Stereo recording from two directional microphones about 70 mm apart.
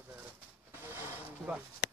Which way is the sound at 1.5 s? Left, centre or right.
Centre.